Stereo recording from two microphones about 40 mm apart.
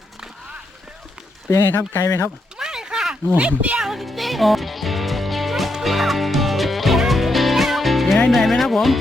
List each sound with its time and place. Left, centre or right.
1.9 s speech: left
2.6 s a sound: centre
3.3 s speech: right
3.8 s music: centre